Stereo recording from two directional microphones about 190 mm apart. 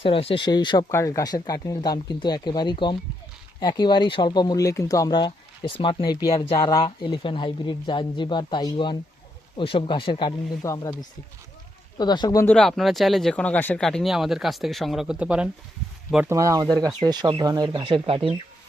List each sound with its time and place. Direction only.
0.0 s speech: 30° left (ahead or behind)
11.9 s speech: 20° left (ahead or behind)
12.5 s speech: centre (ahead or behind); by 18.2 s 30° right (ahead or behind)